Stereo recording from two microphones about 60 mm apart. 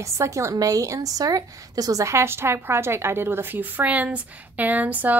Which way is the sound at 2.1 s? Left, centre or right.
Right.